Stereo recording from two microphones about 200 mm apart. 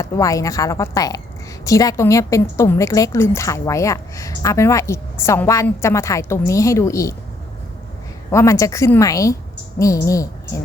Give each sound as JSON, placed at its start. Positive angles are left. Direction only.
{"t": 0.0, "sound": "a woman's voice", "side_deg": 15}
{"t": 8.3, "sound": "a woman's voice", "side_deg": 15}